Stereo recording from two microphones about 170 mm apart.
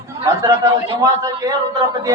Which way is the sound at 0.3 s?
20° right (ahead or behind).